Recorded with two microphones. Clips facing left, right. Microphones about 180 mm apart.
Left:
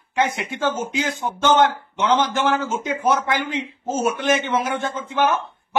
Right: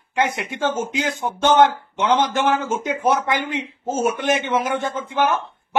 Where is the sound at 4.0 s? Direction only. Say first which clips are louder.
Even; 15° right (ahead or behind).